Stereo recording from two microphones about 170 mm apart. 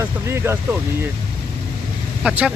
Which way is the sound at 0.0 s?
15° right (ahead or behind).